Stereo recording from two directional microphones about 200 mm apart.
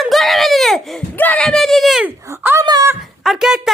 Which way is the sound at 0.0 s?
Centre (ahead or behind).